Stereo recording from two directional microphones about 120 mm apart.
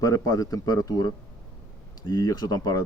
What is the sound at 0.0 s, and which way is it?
Speech, 30° left (ahead or behind).